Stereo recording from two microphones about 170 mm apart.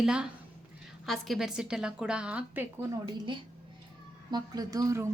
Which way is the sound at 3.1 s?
25° right (ahead or behind).